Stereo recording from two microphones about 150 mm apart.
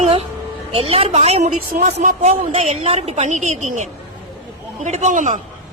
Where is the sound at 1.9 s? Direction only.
45° right (ahead or behind).